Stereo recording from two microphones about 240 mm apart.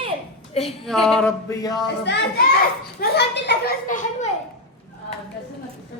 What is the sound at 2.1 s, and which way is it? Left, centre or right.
A child's voice, left.